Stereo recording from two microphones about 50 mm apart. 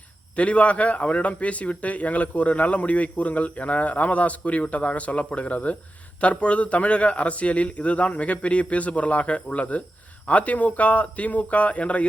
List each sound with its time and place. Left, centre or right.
0.3 s a man's voice: left